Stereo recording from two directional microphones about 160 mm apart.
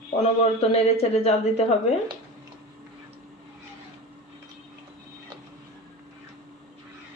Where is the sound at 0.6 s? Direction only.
40° left (ahead or behind).